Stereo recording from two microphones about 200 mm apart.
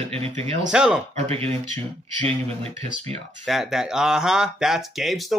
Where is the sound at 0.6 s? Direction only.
5° right (ahead or behind).